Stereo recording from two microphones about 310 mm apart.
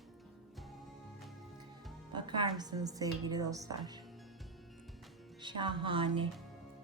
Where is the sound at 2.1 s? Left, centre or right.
Centre.